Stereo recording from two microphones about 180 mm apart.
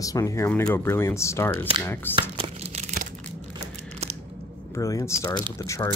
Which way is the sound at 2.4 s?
35° right (ahead or behind).